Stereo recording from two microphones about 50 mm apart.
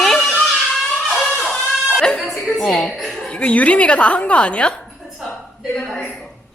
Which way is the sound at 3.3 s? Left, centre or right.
Left.